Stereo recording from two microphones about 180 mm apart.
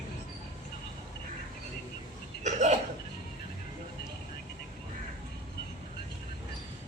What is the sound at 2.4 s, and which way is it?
Hiccup, 40° right (ahead or behind).